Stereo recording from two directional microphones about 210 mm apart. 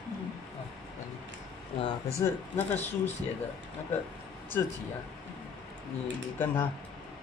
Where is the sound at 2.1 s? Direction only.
10° left (ahead or behind).